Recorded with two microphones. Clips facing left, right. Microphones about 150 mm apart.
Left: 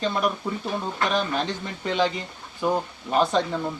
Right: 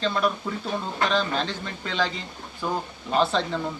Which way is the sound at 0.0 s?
15° left (ahead or behind).